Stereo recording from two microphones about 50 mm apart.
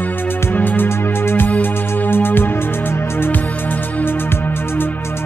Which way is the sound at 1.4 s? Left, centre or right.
Left.